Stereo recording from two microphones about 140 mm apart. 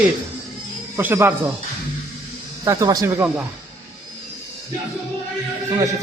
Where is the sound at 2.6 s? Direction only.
25° right (ahead or behind).